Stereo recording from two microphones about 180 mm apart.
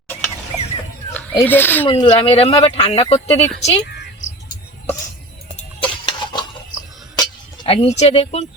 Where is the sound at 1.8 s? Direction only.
25° left (ahead or behind).